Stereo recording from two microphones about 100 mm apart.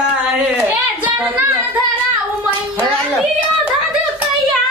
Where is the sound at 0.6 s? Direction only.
15° right (ahead or behind).